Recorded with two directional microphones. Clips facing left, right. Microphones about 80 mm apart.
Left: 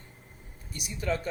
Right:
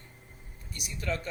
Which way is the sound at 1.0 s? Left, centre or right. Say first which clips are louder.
Left 3 dB; centre.